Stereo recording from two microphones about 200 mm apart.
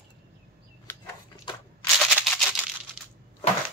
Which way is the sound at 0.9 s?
10° left (ahead or behind).